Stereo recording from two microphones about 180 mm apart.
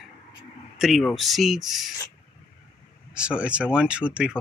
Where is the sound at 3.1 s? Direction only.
5° right (ahead or behind).